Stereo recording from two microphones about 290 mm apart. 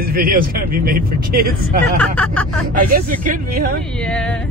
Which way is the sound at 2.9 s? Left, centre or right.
Right.